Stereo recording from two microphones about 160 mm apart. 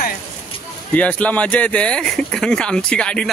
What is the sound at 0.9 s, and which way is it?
Speech, 10° left (ahead or behind).